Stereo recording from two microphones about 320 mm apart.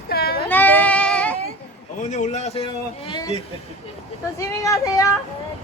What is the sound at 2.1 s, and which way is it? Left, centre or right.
A man's voice, left.